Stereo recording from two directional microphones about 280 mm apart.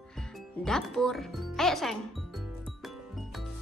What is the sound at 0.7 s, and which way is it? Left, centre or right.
Speech, centre.